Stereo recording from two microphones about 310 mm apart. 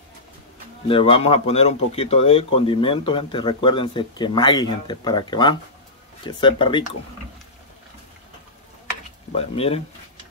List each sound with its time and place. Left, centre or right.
0.8 s speech: centre
9.3 s speech: centre